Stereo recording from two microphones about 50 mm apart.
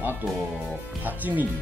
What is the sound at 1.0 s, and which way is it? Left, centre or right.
Speech, right.